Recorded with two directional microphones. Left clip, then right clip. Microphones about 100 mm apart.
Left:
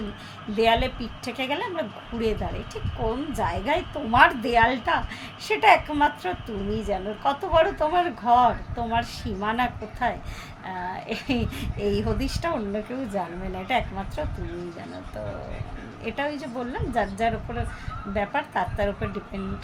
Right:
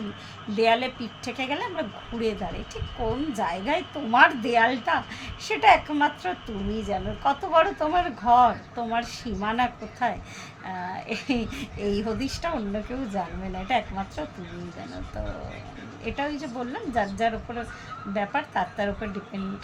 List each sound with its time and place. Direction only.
0.5 s a woman's voice: 15° left (ahead or behind)
16.0 s a woman's voice: 15° left (ahead or behind)